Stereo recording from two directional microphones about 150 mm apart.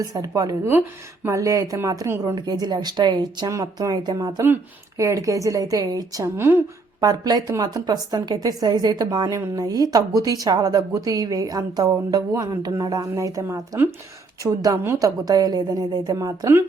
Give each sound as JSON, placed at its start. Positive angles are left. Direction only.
{"t": 0.0, "sound": "a woman's voice", "side_deg": -25}